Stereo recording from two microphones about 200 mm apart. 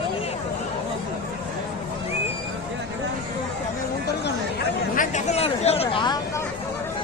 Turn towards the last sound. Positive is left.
turn(degrees=20)  # may be behind; listen again after turning